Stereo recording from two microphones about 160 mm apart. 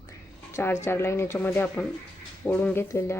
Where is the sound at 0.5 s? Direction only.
15° left (ahead or behind).